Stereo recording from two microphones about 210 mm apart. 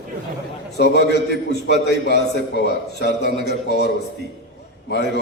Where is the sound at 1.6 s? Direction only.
55° left (ahead or behind).